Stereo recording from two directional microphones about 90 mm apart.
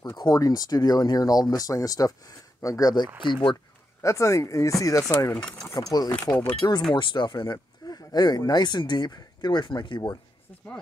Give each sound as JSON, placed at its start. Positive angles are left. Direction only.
{"t": 0.0, "sound": "speech", "side_deg": 45}
{"t": 3.2, "sound": "speech", "side_deg": 65}
{"t": 4.0, "sound": "speech", "side_deg": 35}
{"t": 5.3, "sound": "speech", "side_deg": 15}
{"t": 5.7, "sound": "speech", "side_deg": 45}
{"t": 7.0, "sound": "speech", "side_deg": 60}
{"t": 7.8, "sound": "speech", "side_deg": 50}